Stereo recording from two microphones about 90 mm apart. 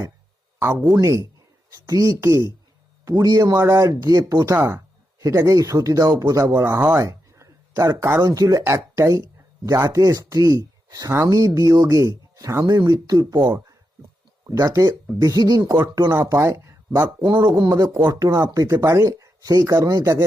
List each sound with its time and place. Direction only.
0.6 s speech: 25° right (ahead or behind)
0.9 s speech: 40° right (ahead or behind)
6.9 s a sound: 35° right (ahead or behind)
8.3 s speech: 40° right (ahead or behind)
12.6 s speech: 50° right (ahead or behind)
17.2 s speech: 55° right (ahead or behind); by 20.2 s 40° right (ahead or behind)